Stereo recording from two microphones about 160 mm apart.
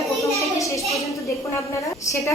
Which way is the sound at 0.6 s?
20° left (ahead or behind).